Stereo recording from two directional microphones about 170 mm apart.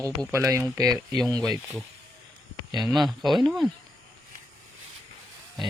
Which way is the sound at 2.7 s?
Centre (ahead or behind).